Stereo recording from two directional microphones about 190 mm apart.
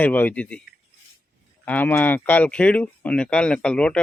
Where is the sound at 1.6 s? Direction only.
10° left (ahead or behind).